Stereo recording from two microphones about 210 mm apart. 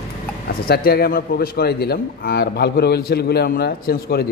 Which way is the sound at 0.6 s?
50° left (ahead or behind).